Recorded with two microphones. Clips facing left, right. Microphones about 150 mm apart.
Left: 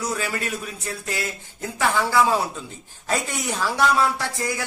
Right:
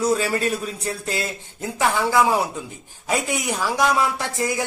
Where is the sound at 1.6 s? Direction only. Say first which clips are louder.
Right 2 dB; 15° right (ahead or behind).